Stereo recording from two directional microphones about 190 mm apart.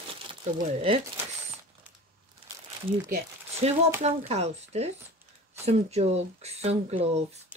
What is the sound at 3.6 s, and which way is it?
A woman's voice, 35° right (ahead or behind).